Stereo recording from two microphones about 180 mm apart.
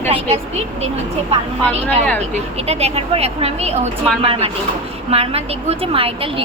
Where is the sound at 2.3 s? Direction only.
35° right (ahead or behind).